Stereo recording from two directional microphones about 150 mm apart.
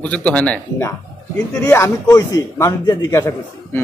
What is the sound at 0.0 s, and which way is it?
Speech, 10° left (ahead or behind).